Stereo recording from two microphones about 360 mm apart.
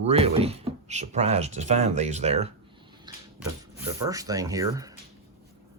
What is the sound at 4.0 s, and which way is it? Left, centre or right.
Speech, centre.